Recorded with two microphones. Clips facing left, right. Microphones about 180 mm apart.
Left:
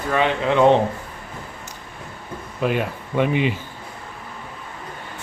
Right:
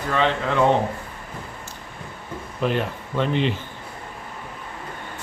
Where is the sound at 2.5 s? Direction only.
5° left (ahead or behind).